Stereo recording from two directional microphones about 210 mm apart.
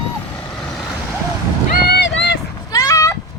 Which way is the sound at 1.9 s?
55° left (ahead or behind).